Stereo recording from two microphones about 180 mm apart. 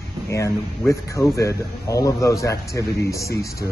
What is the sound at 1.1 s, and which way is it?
Speech, 15° left (ahead or behind).